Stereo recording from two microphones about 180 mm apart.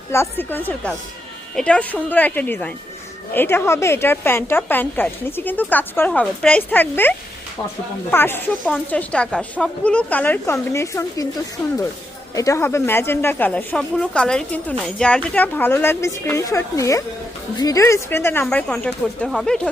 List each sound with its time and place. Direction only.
0.1 s speech: 15° left (ahead or behind)
8.1 s speech: 10° left (ahead or behind)
12.3 s speech: 20° left (ahead or behind); by 19.6 s 5° left (ahead or behind)